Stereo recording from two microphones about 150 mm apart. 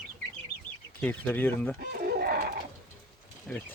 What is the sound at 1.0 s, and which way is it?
Speech, 10° left (ahead or behind).